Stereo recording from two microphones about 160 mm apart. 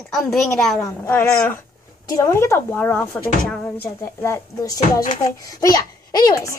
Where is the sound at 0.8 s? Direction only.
15° left (ahead or behind).